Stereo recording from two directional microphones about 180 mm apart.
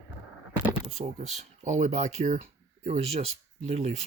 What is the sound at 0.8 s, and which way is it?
Speech, 35° right (ahead or behind).